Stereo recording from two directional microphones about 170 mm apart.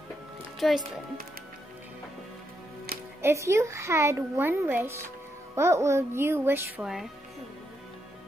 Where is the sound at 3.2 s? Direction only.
15° right (ahead or behind).